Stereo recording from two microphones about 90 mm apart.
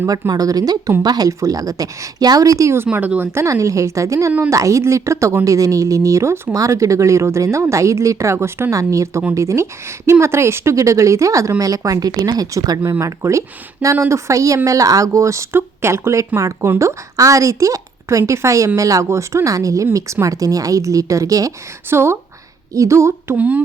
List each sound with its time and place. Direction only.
0.1 s a woman's voice: 45° right (ahead or behind); by 3.2 s 15° right (ahead or behind)
3.3 s a woman's voice: 35° right (ahead or behind)
4.3 s speech: 25° right (ahead or behind)
4.5 s a woman's voice: 35° right (ahead or behind)
23.4 s speech: 15° right (ahead or behind)